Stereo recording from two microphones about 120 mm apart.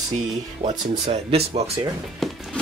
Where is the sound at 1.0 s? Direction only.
60° right (ahead or behind).